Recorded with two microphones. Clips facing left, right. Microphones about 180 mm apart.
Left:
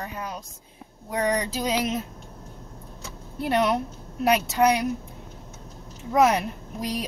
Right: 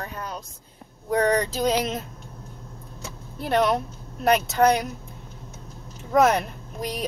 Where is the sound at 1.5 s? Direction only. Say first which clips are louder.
Right 2 dB; 5° left (ahead or behind).